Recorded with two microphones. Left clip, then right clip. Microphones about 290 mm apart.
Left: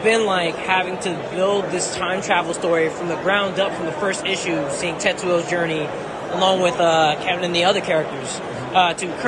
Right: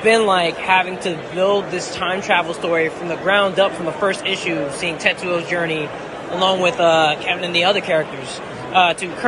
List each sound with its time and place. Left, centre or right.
0.0 s a man's voice: centre